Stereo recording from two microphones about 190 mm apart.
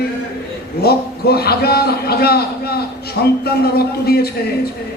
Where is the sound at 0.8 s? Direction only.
55° left (ahead or behind).